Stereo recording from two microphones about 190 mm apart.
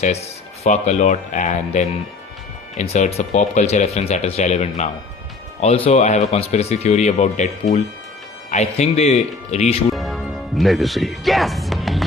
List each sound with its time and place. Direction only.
0.0 s speech: 35° left (ahead or behind)
9.9 s speech: centre (ahead or behind)